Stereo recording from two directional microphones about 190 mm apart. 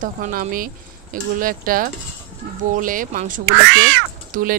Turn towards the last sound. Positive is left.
turn(degrees=-45)  # may be behind; listen again after turning